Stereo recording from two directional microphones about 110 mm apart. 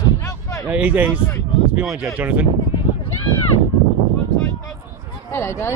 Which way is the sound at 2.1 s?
15° right (ahead or behind).